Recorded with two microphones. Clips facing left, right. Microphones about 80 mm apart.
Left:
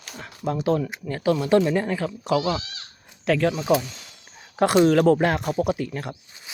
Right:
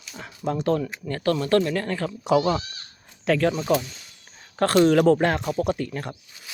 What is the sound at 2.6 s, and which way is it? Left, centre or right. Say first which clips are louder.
Speech: left 1 dB; left.